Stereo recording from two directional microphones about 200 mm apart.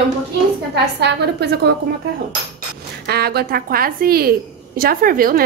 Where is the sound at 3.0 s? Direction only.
50° right (ahead or behind).